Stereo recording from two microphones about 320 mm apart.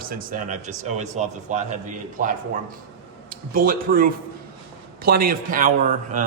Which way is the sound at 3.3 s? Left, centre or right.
Right.